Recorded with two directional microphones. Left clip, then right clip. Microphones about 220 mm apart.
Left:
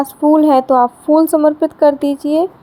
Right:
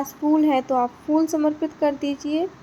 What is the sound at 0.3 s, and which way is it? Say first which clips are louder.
Speech: left 10 dB; 35° left (ahead or behind).